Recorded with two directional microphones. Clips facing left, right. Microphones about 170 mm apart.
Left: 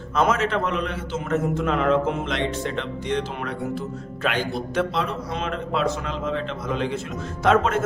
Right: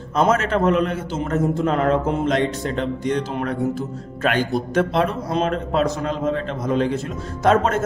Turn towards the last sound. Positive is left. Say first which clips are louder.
# right 2 dB
turn(degrees=-40)  # may be behind; listen again after turning